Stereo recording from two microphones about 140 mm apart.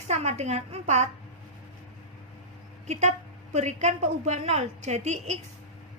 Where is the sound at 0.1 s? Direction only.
50° right (ahead or behind).